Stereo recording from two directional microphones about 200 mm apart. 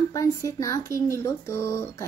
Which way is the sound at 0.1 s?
15° left (ahead or behind).